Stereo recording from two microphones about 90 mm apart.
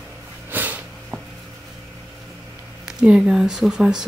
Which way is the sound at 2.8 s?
10° right (ahead or behind).